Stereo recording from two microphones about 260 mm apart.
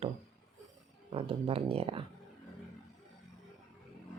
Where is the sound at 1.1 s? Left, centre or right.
Right.